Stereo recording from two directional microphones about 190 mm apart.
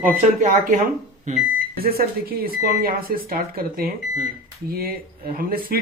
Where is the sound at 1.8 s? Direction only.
50° right (ahead or behind).